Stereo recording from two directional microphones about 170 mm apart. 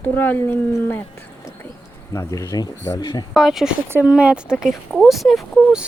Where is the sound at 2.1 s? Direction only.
20° left (ahead or behind).